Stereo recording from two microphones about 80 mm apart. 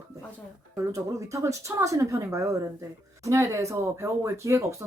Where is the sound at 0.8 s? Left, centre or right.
Right.